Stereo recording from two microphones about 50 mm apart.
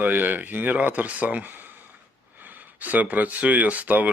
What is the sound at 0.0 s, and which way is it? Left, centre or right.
Speech, right.